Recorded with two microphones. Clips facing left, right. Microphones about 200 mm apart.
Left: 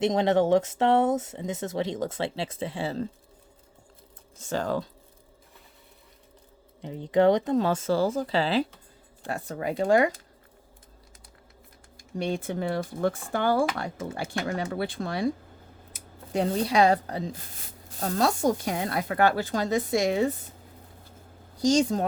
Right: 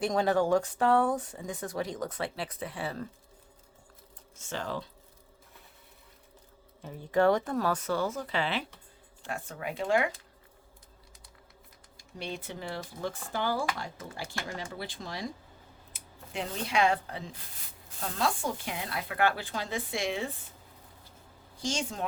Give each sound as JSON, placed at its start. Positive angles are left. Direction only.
{"t": 0.0, "sound": "speech", "side_deg": 20}
{"t": 4.4, "sound": "speech", "side_deg": 40}
{"t": 6.8, "sound": "speech", "side_deg": 20}
{"t": 12.1, "sound": "speech", "side_deg": 50}
{"t": 16.3, "sound": "speech", "side_deg": 40}
{"t": 21.6, "sound": "speech", "side_deg": 40}